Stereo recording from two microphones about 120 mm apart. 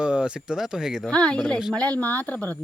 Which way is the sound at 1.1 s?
10° left (ahead or behind).